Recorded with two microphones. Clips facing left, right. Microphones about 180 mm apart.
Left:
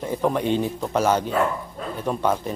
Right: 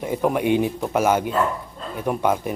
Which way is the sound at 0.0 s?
10° right (ahead or behind).